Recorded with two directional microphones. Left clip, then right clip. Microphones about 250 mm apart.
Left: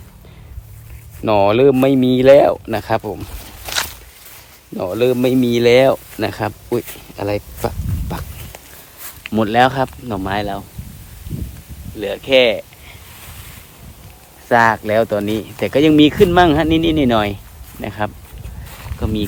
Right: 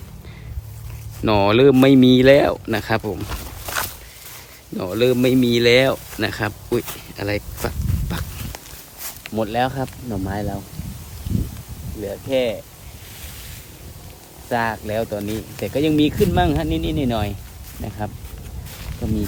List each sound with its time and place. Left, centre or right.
1.2 s speech: centre
4.8 s speech: centre
9.3 s speech: left; by 10.6 s centre
12.0 s speech: left
14.5 s speech: left